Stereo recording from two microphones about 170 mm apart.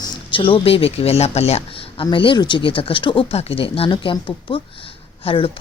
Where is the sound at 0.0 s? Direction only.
30° left (ahead or behind).